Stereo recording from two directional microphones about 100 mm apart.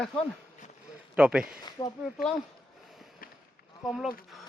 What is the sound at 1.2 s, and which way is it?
Speech, 10° right (ahead or behind).